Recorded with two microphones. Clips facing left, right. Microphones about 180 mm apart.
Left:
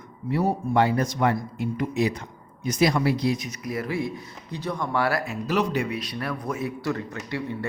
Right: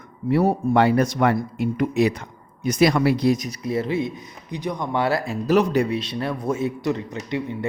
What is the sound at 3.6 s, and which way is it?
Speech, 25° right (ahead or behind).